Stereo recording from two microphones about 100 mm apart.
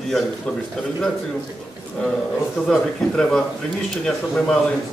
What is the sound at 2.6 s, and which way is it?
A man's voice, 5° left (ahead or behind).